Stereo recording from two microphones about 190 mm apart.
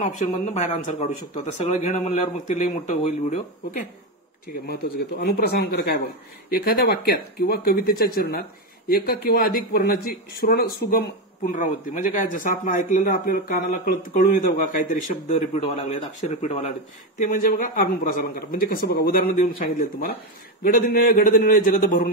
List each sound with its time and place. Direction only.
0.0 s a man's voice: 35° left (ahead or behind)
4.6 s a man's voice: 55° left (ahead or behind); by 16.7 s 30° left (ahead or behind)
17.2 s speech: 45° left (ahead or behind)